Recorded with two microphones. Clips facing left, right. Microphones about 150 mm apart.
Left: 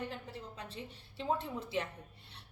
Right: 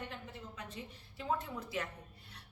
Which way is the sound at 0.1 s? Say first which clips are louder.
Left 3 dB; 35° left (ahead or behind).